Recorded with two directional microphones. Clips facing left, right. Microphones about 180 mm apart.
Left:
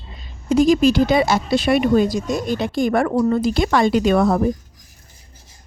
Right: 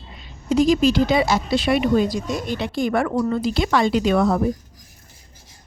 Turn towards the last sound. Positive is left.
turn(degrees=50)  # may be behind; listen again after turning